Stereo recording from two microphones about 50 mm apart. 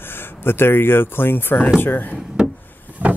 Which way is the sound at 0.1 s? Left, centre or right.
Left.